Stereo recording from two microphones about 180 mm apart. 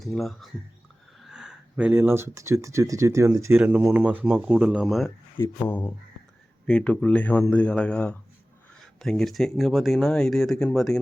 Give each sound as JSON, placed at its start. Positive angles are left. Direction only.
{"t": 0.0, "sound": "speech", "side_deg": 0}
{"t": 5.4, "sound": "a man's voice", "side_deg": 10}